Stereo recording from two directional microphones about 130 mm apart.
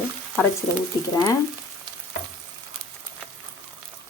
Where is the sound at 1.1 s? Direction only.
25° left (ahead or behind).